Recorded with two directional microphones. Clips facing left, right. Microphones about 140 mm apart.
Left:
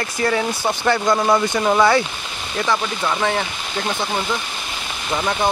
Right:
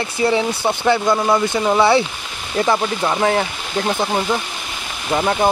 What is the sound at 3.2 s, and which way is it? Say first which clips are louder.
Speech: right 5 dB; 35° right (ahead or behind).